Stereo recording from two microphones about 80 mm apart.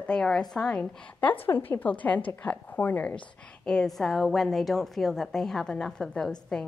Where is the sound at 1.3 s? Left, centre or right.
Left.